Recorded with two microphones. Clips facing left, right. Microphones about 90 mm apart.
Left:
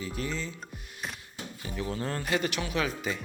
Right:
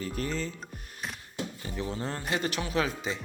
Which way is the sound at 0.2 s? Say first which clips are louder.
Right 2 dB; 40° right (ahead or behind).